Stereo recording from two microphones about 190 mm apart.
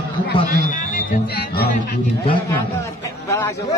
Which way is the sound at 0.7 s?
45° left (ahead or behind).